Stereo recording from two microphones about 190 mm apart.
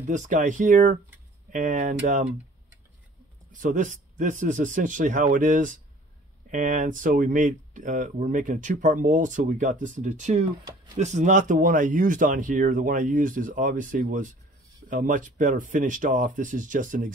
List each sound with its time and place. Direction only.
0.1 s speech: 40° right (ahead or behind)
3.5 s speech: 45° right (ahead or behind)